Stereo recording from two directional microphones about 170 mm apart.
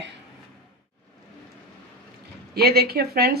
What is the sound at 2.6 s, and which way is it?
Speech, 65° right (ahead or behind).